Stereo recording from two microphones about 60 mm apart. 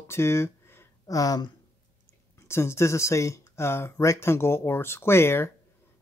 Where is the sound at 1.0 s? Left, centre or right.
Left.